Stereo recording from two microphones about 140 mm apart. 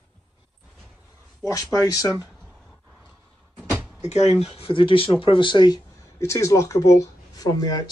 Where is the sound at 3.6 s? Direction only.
5° right (ahead or behind).